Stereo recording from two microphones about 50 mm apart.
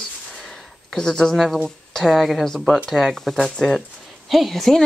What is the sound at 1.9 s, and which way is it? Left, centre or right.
Speech, centre.